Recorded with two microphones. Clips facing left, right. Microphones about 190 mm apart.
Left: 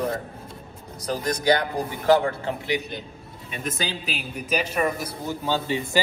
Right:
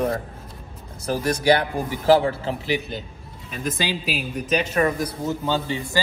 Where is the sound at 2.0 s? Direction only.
30° right (ahead or behind).